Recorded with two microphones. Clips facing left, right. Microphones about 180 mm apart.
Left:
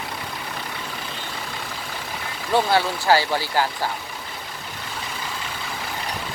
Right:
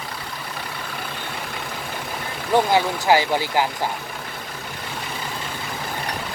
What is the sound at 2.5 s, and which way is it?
Speech, 15° right (ahead or behind).